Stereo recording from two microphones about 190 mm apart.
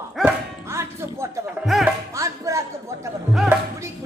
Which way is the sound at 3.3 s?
5° right (ahead or behind).